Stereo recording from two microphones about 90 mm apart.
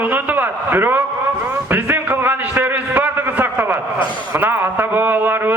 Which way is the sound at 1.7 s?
20° right (ahead or behind).